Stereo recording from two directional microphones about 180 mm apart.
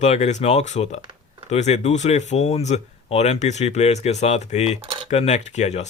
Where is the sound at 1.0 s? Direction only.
25° right (ahead or behind).